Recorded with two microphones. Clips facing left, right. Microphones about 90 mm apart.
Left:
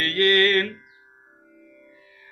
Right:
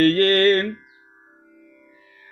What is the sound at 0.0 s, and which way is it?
Mantra, 40° right (ahead or behind).